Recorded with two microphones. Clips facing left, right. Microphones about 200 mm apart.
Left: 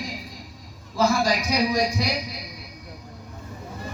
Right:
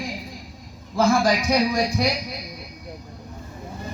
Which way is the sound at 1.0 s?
50° right (ahead or behind).